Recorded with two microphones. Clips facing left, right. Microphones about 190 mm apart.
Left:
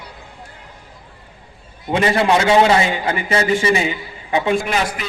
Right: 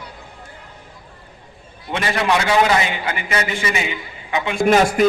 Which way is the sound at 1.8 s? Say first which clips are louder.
Left 4 dB; 25° left (ahead or behind).